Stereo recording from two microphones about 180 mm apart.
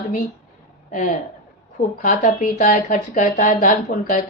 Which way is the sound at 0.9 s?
45° left (ahead or behind).